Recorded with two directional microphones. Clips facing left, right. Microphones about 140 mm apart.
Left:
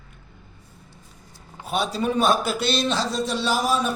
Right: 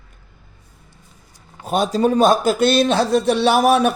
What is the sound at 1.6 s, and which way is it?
A man's voice, 45° right (ahead or behind).